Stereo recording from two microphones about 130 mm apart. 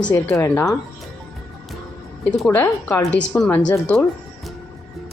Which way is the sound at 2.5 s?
15° left (ahead or behind).